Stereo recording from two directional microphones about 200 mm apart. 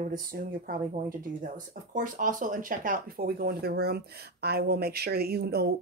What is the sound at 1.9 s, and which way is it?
Speech, 40° right (ahead or behind).